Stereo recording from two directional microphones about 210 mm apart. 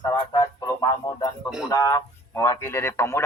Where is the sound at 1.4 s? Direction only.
5° right (ahead or behind).